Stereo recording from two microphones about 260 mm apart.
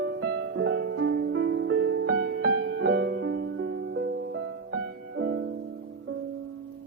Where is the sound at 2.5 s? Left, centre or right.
Right.